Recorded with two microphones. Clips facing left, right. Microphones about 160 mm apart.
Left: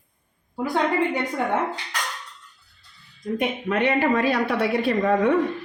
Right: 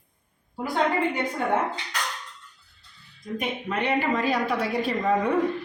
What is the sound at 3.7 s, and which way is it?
A woman's voice, 65° left (ahead or behind).